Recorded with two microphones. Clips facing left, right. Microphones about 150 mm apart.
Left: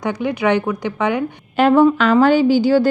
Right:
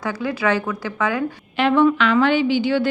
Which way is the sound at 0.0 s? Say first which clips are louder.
Left 4 dB; 20° left (ahead or behind).